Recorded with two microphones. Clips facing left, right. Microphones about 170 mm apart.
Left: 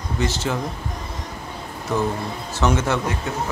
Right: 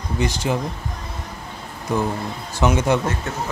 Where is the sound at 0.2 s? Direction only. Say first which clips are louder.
Right 2 dB; 15° right (ahead or behind).